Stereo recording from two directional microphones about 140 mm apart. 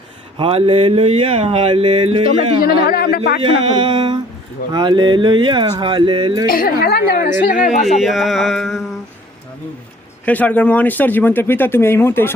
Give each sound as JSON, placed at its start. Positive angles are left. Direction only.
{"t": 0.3, "sound": "speech", "side_deg": -45}
{"t": 2.8, "sound": "a woman's voice", "side_deg": 90}
{"t": 3.4, "sound": "speech", "side_deg": -35}
{"t": 6.5, "sound": "a woman's voice", "side_deg": 90}
{"t": 8.0, "sound": "music", "side_deg": 0}
{"t": 10.2, "sound": "speech", "side_deg": 10}